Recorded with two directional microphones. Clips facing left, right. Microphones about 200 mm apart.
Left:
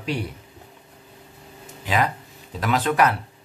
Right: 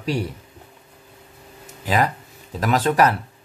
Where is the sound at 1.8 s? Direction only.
40° right (ahead or behind).